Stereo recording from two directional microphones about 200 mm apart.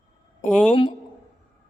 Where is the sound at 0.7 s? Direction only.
25° left (ahead or behind).